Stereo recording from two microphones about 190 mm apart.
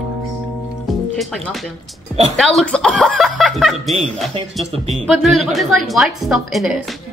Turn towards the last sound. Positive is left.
turn(degrees=0)  # may be behind; listen again after turning